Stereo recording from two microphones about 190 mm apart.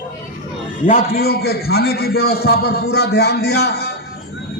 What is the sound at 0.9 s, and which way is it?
A man's voice, 50° left (ahead or behind).